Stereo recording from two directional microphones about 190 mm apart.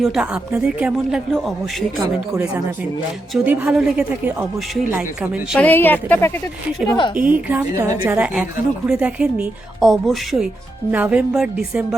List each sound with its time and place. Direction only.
0.0 s speech: 5° right (ahead or behind)
3.3 s speech: 10° right (ahead or behind)
5.5 s a woman's voice: 10° left (ahead or behind)
6.9 s a woman's voice: 25° left (ahead or behind)
7.3 s speech: 10° right (ahead or behind)